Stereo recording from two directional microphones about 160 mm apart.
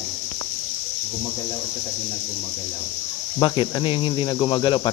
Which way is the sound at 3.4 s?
25° left (ahead or behind).